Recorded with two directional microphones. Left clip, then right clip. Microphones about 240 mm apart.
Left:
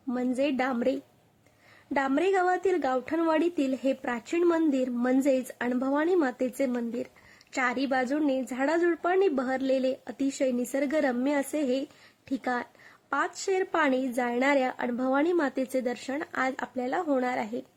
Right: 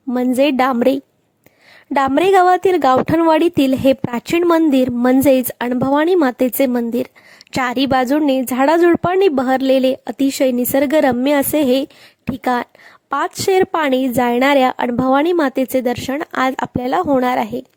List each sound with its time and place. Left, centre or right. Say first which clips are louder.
0.1 s speech: right 13 dB; right